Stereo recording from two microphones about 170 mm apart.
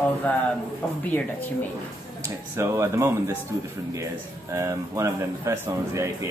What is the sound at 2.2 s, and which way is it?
Speech, 15° right (ahead or behind).